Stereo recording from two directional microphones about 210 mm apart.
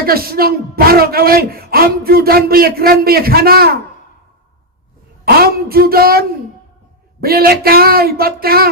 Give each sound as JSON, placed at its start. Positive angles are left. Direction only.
{"t": 0.0, "sound": "a man's voice", "side_deg": -45}
{"t": 5.2, "sound": "a man's voice", "side_deg": -45}